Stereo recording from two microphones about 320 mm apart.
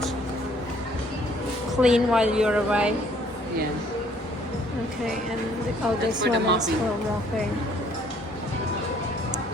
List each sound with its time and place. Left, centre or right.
1.8 s a woman's voice: centre
6.2 s a woman's voice: right